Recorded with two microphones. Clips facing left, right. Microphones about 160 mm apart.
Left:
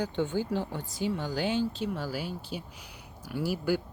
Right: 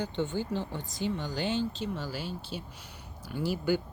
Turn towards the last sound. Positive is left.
turn(degrees=10)  # may be behind; listen again after turning